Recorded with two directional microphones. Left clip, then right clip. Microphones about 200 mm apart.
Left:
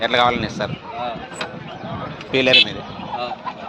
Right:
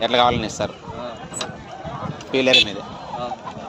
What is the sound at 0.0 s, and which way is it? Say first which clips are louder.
Speech: even; 20° right (ahead or behind).